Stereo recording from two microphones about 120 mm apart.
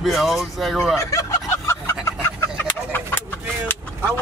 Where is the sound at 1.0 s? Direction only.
25° left (ahead or behind).